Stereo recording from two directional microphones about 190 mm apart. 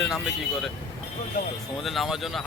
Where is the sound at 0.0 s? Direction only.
Centre (ahead or behind).